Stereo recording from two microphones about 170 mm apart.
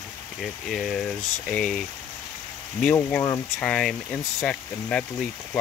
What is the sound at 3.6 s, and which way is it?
Speech, 5° left (ahead or behind).